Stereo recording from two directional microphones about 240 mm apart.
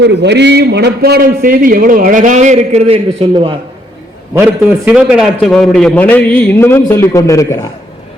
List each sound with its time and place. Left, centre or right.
0.0 s a man's voice: right
4.9 s a man's voice: centre